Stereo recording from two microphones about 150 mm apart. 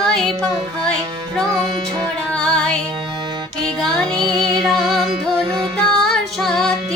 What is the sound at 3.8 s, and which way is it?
Music, 5° left (ahead or behind).